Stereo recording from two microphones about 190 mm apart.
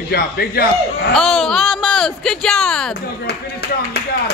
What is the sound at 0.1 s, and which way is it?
Speech, 55° left (ahead or behind).